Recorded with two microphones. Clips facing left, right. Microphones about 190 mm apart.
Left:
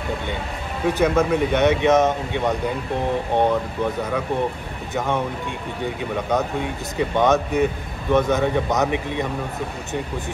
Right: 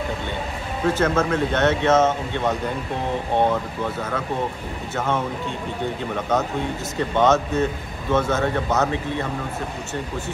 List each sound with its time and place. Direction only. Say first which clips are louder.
0.8 s speech: left 2 dB; 15° left (ahead or behind)
6.3 s speech: right 1 dB; 15° left (ahead or behind)